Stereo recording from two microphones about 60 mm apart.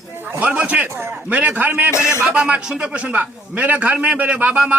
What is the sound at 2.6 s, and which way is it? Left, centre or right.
A man's voice, centre.